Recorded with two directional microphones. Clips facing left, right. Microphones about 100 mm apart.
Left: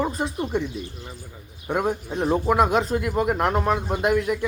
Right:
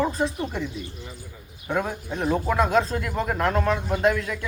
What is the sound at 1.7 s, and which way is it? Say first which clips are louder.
Speech: left 3 dB; 15° left (ahead or behind).